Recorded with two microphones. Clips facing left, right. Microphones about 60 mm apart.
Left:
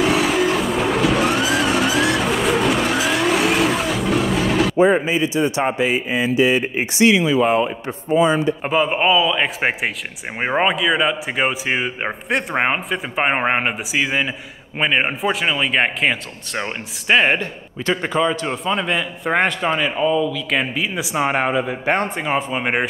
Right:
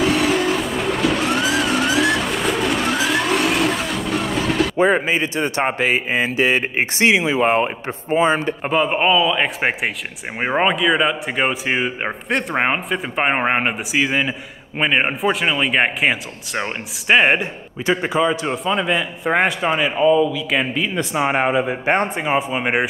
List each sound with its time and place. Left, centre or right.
0.0 s vehicle: centre
4.7 s a man's voice: right
7.1 s speech: right
7.4 s a man's voice: right
8.6 s a man's voice: centre
12.3 s speech: centre
12.5 s a man's voice: centre
22.2 s a man's voice: centre